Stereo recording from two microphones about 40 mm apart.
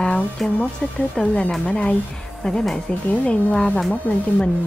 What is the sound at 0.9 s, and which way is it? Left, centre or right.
Speech, left.